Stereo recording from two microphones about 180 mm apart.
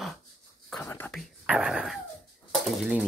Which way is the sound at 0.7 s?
10° left (ahead or behind).